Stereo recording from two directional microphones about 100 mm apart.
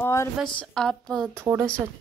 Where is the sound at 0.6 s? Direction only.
5° left (ahead or behind).